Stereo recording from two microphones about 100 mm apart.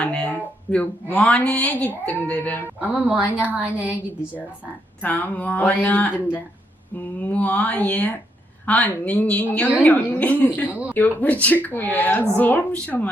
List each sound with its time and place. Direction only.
0.0 s speech: 10° left (ahead or behind)
2.9 s a woman's voice: 10° right (ahead or behind)
5.0 s speech: 15° left (ahead or behind)
10.7 s a woman's voice: 15° right (ahead or behind)
10.9 s speech: 15° left (ahead or behind)